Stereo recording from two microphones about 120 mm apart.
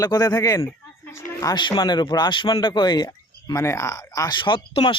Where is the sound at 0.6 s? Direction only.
25° left (ahead or behind).